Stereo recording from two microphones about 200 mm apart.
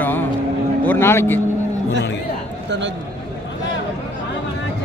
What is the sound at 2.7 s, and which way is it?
Speech, 65° right (ahead or behind).